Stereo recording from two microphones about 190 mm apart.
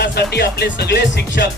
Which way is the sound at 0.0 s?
60° left (ahead or behind).